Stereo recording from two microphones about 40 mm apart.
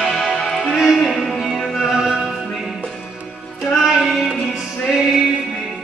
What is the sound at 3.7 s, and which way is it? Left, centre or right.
Music, centre.